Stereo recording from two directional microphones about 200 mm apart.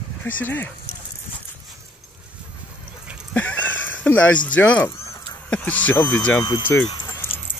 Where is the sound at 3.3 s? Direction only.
5° left (ahead or behind).